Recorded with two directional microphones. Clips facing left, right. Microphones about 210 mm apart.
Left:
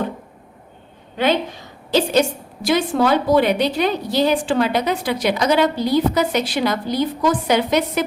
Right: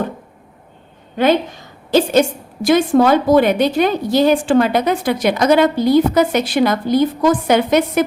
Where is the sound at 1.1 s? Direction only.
50° right (ahead or behind).